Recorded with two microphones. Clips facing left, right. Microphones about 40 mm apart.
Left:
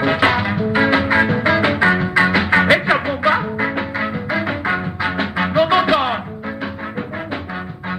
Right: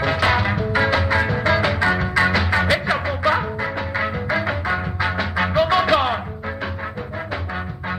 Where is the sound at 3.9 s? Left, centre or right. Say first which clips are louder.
Left 1 dB; centre.